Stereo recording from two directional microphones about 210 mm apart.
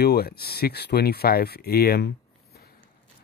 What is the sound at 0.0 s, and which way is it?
Speech, 50° left (ahead or behind).